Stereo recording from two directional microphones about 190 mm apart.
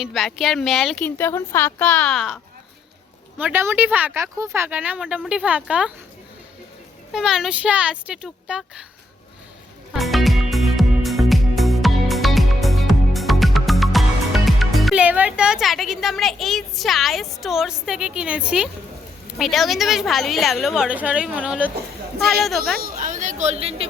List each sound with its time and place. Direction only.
0.0 s speech: centre (ahead or behind)
7.1 s speech: 5° right (ahead or behind)
9.9 s music: centre (ahead or behind)
19.4 s speech: centre (ahead or behind)
22.8 s speech: 45° right (ahead or behind)